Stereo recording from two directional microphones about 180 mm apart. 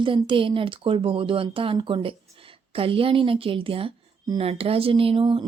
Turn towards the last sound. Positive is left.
turn(degrees=-30)  # may be behind; listen again after turning